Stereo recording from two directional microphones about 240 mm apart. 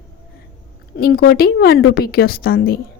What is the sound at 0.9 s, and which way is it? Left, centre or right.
A woman's voice, left.